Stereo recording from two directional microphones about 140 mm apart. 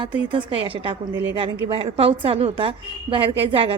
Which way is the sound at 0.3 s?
40° right (ahead or behind).